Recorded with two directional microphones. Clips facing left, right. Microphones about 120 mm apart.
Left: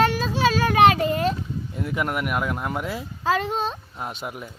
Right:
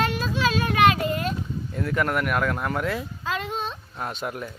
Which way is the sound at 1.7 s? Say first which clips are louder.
Right 2 dB; 10° left (ahead or behind).